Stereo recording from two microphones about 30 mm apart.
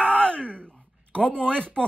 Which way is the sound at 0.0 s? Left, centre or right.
Left.